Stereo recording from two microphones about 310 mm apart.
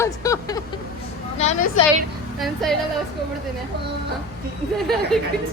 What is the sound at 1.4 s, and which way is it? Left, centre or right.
Speech, left.